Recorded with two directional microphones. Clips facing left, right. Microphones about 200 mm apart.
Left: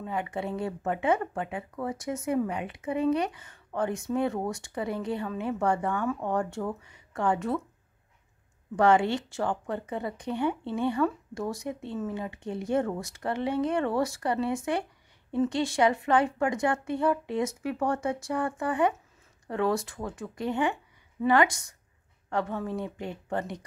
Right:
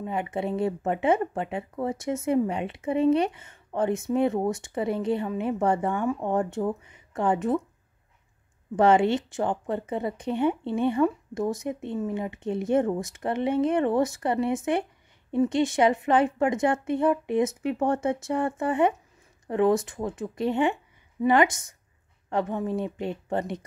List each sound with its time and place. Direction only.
0.0 s speech: 20° right (ahead or behind)
8.7 s speech: 20° right (ahead or behind)